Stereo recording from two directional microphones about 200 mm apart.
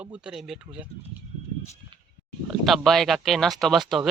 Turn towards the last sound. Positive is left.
turn(degrees=0)  # may be behind; listen again after turning